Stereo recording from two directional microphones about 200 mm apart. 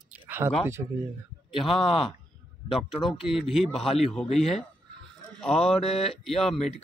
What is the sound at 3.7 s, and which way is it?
Speech, 30° left (ahead or behind).